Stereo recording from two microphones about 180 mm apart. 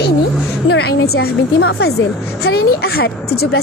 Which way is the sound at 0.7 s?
65° left (ahead or behind).